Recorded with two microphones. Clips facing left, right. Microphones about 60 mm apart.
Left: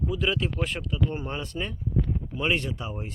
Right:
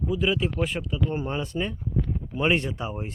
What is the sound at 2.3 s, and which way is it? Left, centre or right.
Speech, centre.